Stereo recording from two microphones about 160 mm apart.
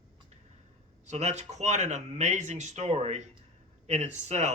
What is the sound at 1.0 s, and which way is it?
Speech, 45° right (ahead or behind).